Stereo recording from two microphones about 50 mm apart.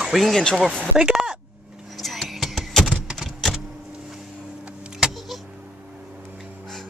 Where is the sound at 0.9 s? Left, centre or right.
Centre.